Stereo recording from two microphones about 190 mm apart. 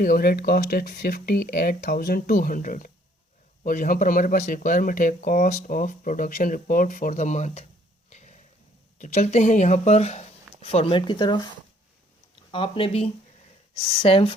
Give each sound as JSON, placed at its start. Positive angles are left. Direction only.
{"t": 0.0, "sound": "speech", "side_deg": 50}
{"t": 8.1, "sound": "a sound", "side_deg": 35}
{"t": 9.0, "sound": "speech", "side_deg": 35}
{"t": 12.5, "sound": "speech", "side_deg": 25}